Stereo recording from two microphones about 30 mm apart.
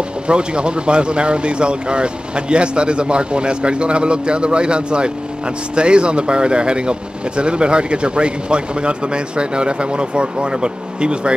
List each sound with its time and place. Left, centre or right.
0.3 s speech: right